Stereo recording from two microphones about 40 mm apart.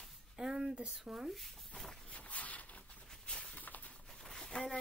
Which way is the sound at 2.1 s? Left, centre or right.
Left.